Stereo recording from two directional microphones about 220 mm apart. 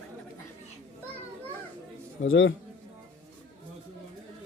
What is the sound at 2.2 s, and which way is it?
Speech, 60° left (ahead or behind).